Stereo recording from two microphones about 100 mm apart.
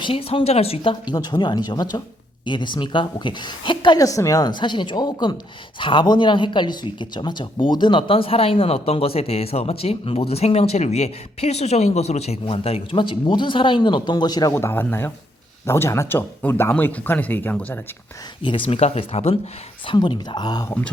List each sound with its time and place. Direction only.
0.0 s speech: 70° left (ahead or behind)
1.0 s speech: 40° left (ahead or behind)
3.9 s a woman's voice: 35° left (ahead or behind)
4.6 s speech: 50° left (ahead or behind)
5.8 s speech: 55° left (ahead or behind)
14.5 s speech: 20° left (ahead or behind)
18.4 s speech: 60° left (ahead or behind); by 19.4 s 75° left (ahead or behind)
19.9 s speech: 50° left (ahead or behind)